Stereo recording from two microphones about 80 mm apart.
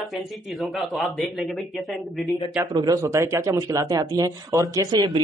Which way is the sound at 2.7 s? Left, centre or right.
Right.